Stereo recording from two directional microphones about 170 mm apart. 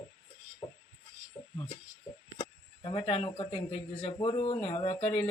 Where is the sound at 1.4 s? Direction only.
20° left (ahead or behind).